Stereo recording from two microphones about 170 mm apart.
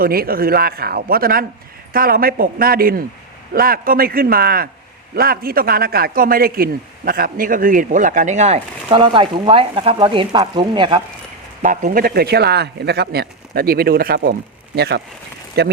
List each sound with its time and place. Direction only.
0.0 s a man's voice: 60° right (ahead or behind); by 8.6 s 45° right (ahead or behind)
8.9 s speech: 30° right (ahead or behind)
11.6 s speech: 50° right (ahead or behind); by 14.3 s 65° right (ahead or behind)
14.8 s speech: 75° right (ahead or behind)